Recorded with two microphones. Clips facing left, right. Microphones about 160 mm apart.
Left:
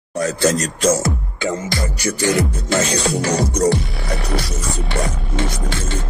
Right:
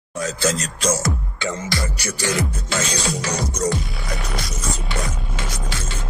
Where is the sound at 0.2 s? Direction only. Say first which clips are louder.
Left 5 dB; 45° left (ahead or behind).